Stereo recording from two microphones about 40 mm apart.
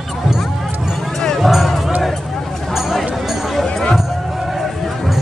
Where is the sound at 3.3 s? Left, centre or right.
Centre.